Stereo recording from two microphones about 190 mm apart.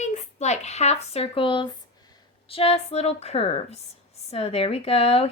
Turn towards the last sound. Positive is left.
turn(degrees=30)  # may be behind; listen again after turning